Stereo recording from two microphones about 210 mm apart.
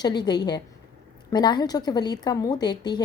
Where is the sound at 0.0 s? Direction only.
20° left (ahead or behind).